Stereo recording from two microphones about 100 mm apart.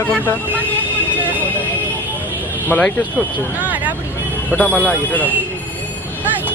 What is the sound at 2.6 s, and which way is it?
Speech, 15° left (ahead or behind).